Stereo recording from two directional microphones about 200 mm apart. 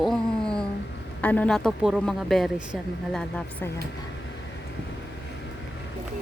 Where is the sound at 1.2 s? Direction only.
10° left (ahead or behind).